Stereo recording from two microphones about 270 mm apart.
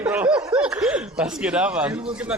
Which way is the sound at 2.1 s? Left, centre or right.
Centre.